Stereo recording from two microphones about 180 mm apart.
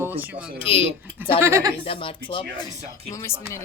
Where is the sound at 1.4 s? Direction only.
15° right (ahead or behind).